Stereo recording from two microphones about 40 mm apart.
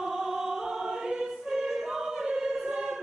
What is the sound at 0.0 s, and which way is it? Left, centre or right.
Choir, centre.